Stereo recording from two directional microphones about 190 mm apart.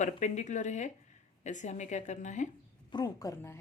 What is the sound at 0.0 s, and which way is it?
Speech, 40° left (ahead or behind).